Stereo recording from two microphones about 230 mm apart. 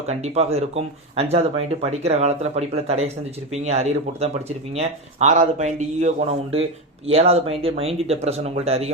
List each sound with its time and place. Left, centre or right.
0.1 s speech: right
7.1 s speech: right